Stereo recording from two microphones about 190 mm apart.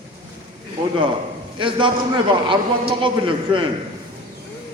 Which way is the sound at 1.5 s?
25° right (ahead or behind).